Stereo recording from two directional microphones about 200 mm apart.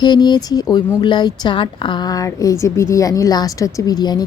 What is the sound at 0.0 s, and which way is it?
A woman's voice, 20° left (ahead or behind).